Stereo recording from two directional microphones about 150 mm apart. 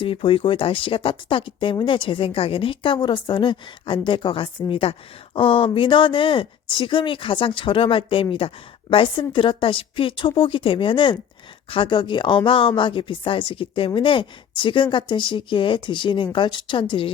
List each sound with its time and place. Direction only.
0.0 s speech: 35° left (ahead or behind)